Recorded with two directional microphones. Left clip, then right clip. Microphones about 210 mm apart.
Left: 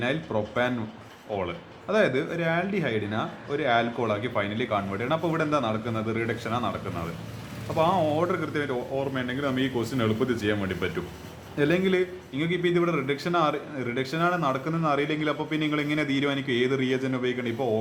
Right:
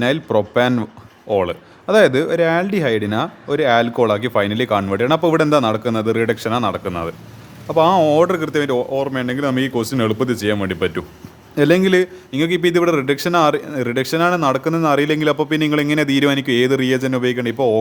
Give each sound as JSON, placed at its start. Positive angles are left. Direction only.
{"t": 0.0, "sound": "a man's voice", "side_deg": -50}